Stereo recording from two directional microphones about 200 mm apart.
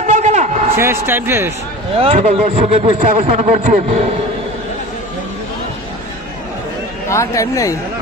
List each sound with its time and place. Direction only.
0.0 s a sound: 35° right (ahead or behind)
0.7 s speech: 10° right (ahead or behind)
2.0 s a man's voice: 35° right (ahead or behind)
7.1 s speech: 15° left (ahead or behind)